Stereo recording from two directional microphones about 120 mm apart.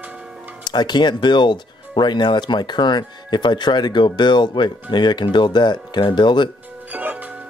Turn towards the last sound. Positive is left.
turn(degrees=-15)  # may be behind; listen again after turning